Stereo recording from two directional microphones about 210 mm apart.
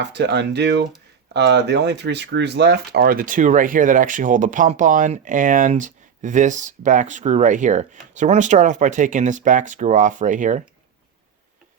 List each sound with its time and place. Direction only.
0.0 s speech: 55° right (ahead or behind); by 10.6 s 35° right (ahead or behind)